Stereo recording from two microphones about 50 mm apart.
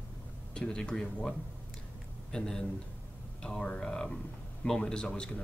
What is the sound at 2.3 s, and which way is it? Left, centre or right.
A man's voice, centre.